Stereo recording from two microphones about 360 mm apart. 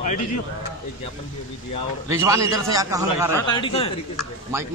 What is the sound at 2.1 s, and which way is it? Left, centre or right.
A man's voice, centre.